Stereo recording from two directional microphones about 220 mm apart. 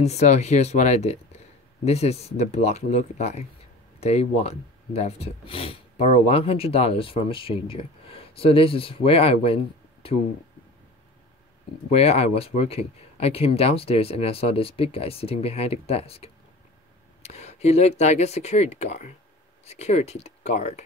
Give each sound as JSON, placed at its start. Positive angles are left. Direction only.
{"t": 0.0, "sound": "speech", "side_deg": 30}
{"t": 11.9, "sound": "speech", "side_deg": 25}